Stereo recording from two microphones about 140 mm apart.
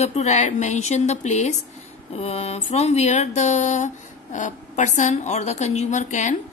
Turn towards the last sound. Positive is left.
turn(degrees=60)  # may be behind; listen again after turning